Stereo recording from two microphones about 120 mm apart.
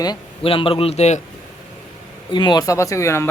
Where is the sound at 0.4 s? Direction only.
50° left (ahead or behind); by 1.2 s 65° left (ahead or behind).